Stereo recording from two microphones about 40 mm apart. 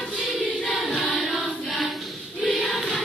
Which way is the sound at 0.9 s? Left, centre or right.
Left.